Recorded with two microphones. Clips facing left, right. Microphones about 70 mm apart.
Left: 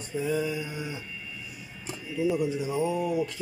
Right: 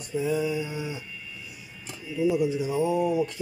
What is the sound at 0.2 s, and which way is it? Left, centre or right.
Speech, centre.